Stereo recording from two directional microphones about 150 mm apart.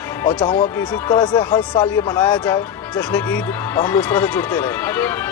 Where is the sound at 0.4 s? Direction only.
40° left (ahead or behind).